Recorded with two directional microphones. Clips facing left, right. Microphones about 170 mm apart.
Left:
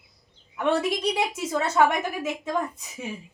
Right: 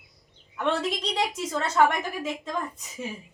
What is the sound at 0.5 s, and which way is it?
Speech, 10° left (ahead or behind).